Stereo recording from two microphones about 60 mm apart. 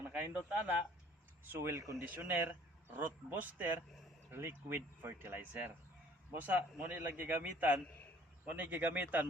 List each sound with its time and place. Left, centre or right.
0.1 s speech: right
1.5 s speech: right
2.0 s speech: right